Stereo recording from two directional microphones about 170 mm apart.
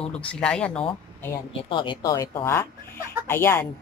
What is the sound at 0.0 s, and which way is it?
Speech, 5° left (ahead or behind).